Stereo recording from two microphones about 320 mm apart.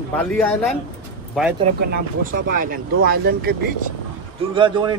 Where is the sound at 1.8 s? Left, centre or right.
Right.